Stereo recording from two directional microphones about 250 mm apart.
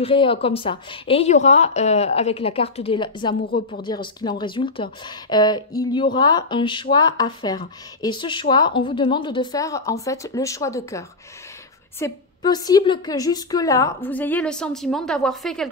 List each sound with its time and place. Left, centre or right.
0.0 s a woman's voice: left
3.4 s speech: left
4.2 s a woman's voice: centre